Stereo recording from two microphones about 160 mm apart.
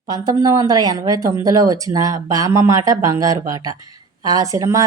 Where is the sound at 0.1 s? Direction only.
25° right (ahead or behind).